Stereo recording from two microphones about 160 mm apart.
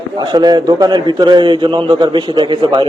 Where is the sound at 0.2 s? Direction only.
25° right (ahead or behind).